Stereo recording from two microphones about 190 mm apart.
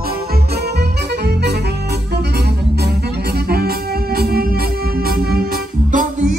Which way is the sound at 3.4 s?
55° right (ahead or behind).